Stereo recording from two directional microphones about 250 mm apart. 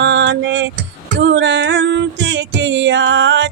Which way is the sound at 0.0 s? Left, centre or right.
Right.